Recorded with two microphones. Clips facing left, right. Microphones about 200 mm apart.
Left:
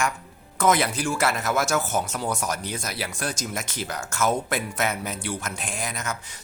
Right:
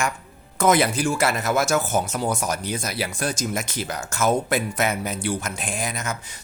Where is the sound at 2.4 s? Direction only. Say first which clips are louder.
Right 3 dB; 5° right (ahead or behind).